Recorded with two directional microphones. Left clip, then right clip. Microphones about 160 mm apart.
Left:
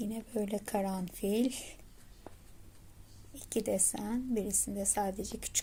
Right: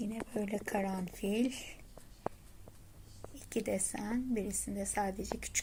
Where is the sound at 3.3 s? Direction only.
20° left (ahead or behind).